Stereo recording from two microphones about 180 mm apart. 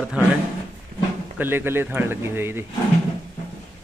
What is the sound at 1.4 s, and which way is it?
A man's voice, 10° right (ahead or behind).